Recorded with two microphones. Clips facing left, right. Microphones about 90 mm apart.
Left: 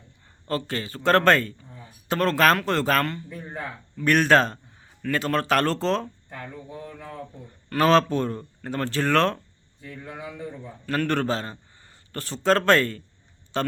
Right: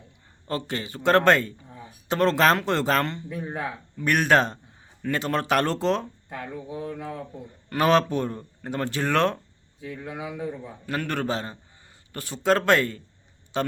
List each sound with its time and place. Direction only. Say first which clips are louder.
0.4 s a man's voice: left 1 dB; 20° right (ahead or behind)
9.8 s speech: right 3 dB; 5° right (ahead or behind)